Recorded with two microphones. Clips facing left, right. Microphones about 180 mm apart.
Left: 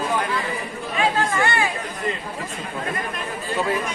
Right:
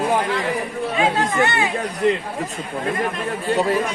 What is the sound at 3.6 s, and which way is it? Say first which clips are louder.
Speech: right 3 dB; 40° right (ahead or behind).